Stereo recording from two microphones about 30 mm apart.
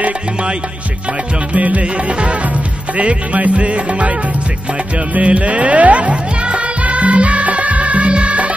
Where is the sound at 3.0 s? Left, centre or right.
Right.